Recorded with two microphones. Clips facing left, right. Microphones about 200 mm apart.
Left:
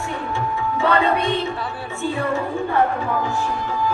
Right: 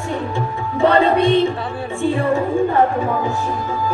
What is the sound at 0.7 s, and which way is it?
Music, 35° right (ahead or behind).